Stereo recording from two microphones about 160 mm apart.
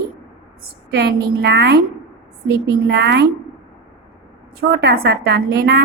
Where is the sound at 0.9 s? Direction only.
90° right.